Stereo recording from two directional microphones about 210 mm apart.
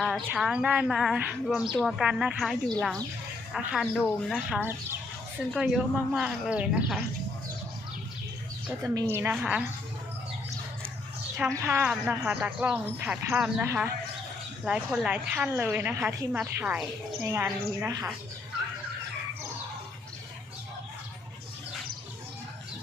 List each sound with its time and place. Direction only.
0.3 s speech: 5° right (ahead or behind)
8.6 s a woman's voice: 15° right (ahead or behind)
11.3 s a woman's voice: 15° right (ahead or behind)